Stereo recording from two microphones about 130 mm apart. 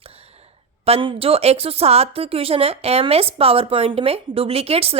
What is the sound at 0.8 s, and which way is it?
Speech, 45° right (ahead or behind).